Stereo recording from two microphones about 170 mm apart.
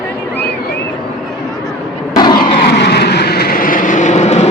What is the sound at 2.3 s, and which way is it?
Vehicle, 70° left (ahead or behind).